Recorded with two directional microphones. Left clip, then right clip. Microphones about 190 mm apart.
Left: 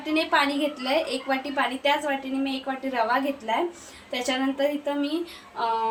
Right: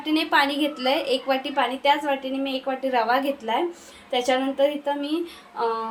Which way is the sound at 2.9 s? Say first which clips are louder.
Right 2 dB; 40° right (ahead or behind).